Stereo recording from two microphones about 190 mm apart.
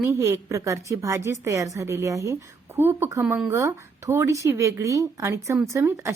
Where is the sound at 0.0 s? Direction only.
15° right (ahead or behind).